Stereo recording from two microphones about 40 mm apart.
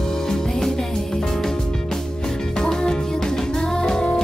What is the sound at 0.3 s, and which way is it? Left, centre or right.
Music, centre.